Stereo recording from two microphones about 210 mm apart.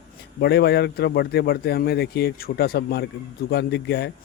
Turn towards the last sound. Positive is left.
turn(degrees=55)  # may be behind; listen again after turning